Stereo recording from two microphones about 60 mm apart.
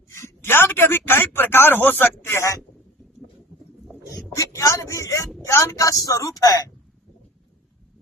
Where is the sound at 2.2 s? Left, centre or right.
Left.